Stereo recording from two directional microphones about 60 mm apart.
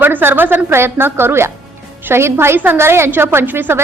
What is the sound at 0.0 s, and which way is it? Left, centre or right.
A woman's voice, right.